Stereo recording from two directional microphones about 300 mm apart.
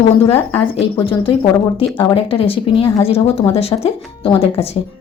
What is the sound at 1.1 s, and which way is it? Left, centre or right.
Speech, centre.